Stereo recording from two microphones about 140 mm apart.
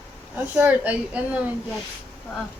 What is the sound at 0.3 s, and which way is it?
Child singing, 10° right (ahead or behind).